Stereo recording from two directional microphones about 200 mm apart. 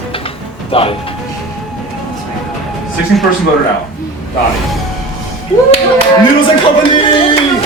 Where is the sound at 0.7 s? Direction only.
25° left (ahead or behind).